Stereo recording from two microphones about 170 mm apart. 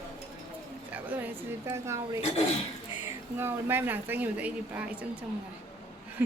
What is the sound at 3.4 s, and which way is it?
A woman's voice, 15° right (ahead or behind).